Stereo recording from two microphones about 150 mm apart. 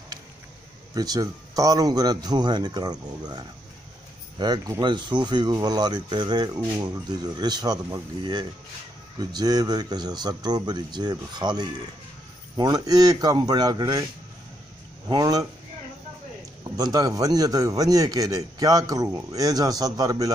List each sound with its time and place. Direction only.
0.9 s speech: 25° right (ahead or behind)
15.0 s speech: 25° right (ahead or behind)
16.7 s speech: 25° right (ahead or behind)